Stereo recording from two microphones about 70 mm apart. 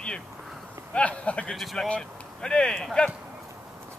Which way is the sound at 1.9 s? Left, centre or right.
Centre.